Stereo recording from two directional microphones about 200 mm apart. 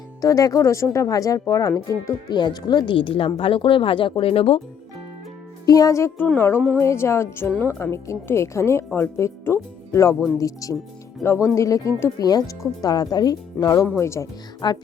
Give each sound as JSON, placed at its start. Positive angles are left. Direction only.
{"t": 0.2, "sound": "a woman's voice", "side_deg": 15}
{"t": 5.6, "sound": "a woman's voice", "side_deg": 15}